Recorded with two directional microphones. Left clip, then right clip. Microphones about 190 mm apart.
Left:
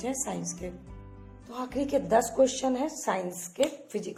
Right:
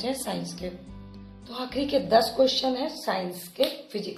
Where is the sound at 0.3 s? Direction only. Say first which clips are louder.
Right 3 dB; 25° left (ahead or behind).